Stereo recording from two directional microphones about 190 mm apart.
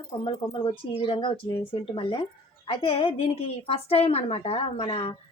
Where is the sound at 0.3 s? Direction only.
30° left (ahead or behind).